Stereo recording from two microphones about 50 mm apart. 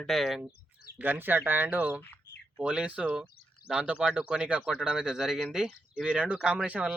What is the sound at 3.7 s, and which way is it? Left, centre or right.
Speech, centre.